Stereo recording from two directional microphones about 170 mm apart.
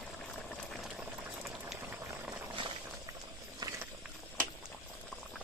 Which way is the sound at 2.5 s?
30° right (ahead or behind).